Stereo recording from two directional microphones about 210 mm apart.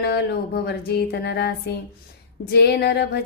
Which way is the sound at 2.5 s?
50° left (ahead or behind).